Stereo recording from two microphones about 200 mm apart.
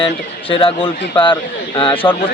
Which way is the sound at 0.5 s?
25° left (ahead or behind).